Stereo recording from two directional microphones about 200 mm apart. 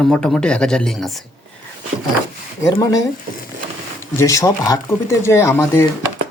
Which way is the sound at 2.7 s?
20° left (ahead or behind).